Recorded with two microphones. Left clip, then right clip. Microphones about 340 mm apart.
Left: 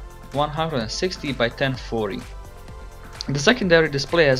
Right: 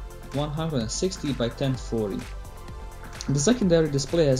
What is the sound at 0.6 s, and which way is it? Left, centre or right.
Speech, centre.